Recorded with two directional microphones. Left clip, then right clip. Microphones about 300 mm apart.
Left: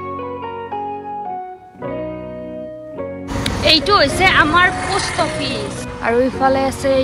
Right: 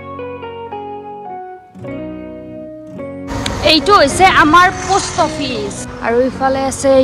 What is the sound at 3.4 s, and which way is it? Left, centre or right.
Speech, centre.